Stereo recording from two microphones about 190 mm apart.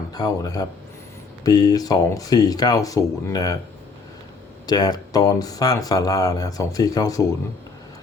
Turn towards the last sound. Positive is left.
turn(degrees=20)  # may be behind; listen again after turning